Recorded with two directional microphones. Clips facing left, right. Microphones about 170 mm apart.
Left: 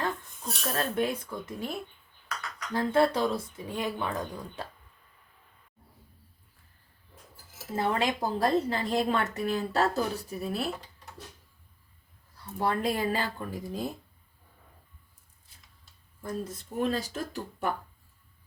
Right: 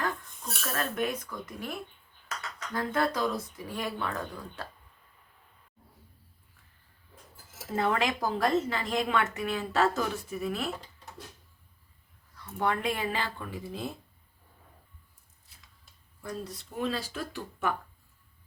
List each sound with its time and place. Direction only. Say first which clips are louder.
0.6 s speech: left 2 dB; 30° left (ahead or behind)
7.8 s a woman's voice: even; 30° left (ahead or behind)
12.4 s a woman's voice: left 1 dB; 35° left (ahead or behind)
16.2 s speech: left 3 dB; 50° left (ahead or behind)